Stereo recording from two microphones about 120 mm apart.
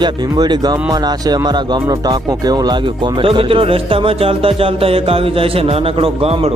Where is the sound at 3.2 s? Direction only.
50° right (ahead or behind).